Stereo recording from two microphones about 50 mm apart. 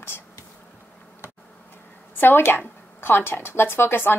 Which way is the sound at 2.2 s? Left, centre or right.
Left.